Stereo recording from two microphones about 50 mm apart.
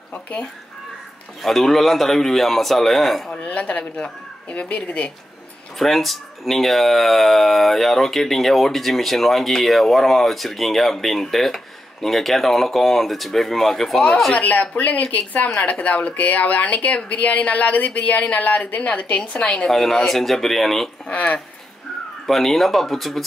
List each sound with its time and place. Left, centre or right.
0.1 s speech: left
1.4 s speech: centre
3.7 s speech: left
5.8 s speech: centre
14.3 s speech: left
19.7 s speech: centre
21.1 s speech: left
22.2 s speech: centre